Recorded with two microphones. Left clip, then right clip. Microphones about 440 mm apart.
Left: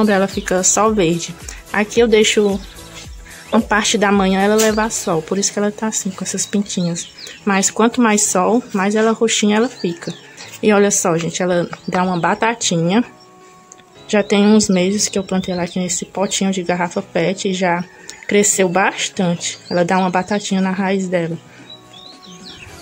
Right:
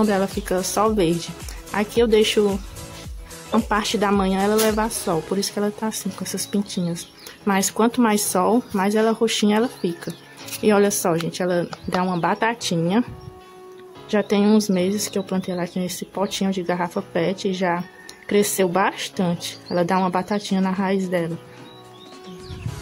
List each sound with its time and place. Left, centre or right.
0.0 s speech: right
14.0 s speech: right